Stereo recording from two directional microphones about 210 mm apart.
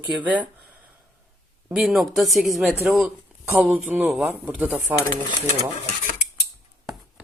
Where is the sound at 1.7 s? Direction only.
Centre (ahead or behind).